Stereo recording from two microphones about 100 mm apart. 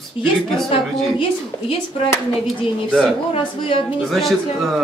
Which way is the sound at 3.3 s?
65° left (ahead or behind).